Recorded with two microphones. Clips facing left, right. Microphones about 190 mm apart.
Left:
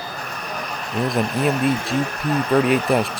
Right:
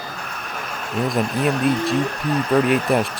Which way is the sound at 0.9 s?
Centre (ahead or behind).